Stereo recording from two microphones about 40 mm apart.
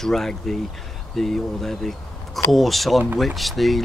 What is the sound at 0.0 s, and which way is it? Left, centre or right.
Speech, centre.